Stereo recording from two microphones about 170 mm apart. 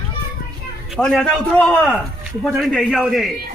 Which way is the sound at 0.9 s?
Centre (ahead or behind).